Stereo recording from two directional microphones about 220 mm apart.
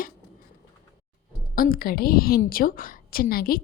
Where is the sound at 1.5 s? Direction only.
40° left (ahead or behind).